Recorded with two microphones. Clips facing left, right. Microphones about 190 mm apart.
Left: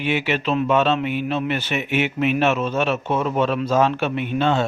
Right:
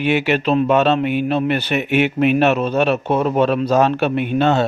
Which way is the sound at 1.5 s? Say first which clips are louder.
Right 5 dB; 60° right (ahead or behind).